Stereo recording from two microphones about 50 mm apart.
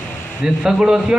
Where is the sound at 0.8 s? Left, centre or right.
Centre.